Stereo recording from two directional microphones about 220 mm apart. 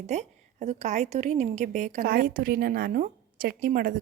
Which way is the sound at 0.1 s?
30° right (ahead or behind).